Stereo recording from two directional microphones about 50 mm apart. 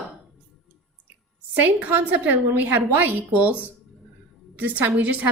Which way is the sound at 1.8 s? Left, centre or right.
Right.